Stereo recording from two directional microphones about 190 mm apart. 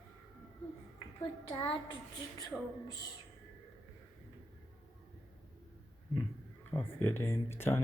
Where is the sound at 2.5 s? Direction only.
Centre (ahead or behind).